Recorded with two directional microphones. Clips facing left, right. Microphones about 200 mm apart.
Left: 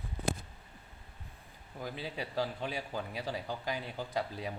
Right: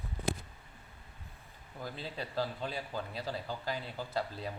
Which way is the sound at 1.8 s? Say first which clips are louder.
Left 2 dB; 15° left (ahead or behind).